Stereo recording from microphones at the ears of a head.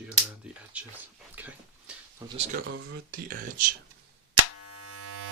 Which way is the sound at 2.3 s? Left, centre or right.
Right.